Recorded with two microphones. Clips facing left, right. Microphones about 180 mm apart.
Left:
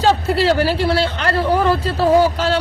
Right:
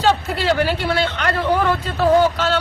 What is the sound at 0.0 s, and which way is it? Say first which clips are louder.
Speech: left 3 dB; 35° left (ahead or behind).